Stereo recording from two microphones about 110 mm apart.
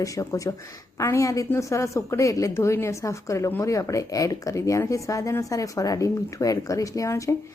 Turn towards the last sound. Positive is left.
turn(degrees=30)  # may be behind; listen again after turning